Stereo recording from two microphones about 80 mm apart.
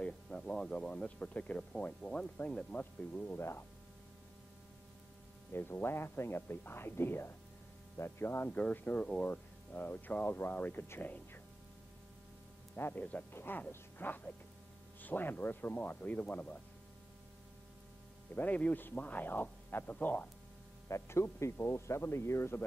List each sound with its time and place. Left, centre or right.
0.0 s speech: centre; by 3.6 s left
5.5 s speech: left
12.7 s speech: left
18.3 s speech: centre
20.9 s speech: left